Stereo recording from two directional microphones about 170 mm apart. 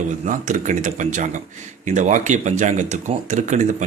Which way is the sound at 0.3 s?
45° right (ahead or behind).